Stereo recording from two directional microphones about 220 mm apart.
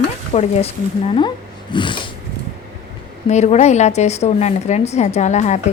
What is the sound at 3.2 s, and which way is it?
A woman's voice, 30° left (ahead or behind).